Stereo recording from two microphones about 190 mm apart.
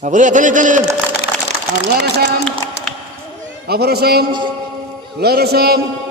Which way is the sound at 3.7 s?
55° right (ahead or behind).